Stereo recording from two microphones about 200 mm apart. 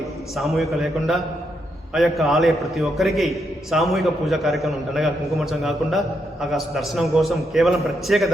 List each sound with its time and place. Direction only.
0.3 s a man's voice: centre (ahead or behind)